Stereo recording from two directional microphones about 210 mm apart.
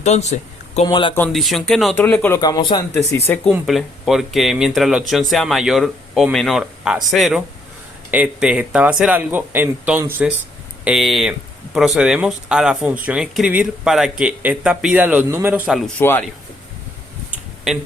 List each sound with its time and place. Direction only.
0.0 s speech: 35° left (ahead or behind)
1.1 s speech: 5° left (ahead or behind)
3.5 s speech: centre (ahead or behind)
16.0 s speech: 10° left (ahead or behind)
17.7 s speech: 5° right (ahead or behind)